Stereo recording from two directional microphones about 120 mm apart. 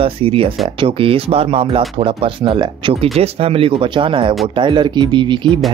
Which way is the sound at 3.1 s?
55° right (ahead or behind).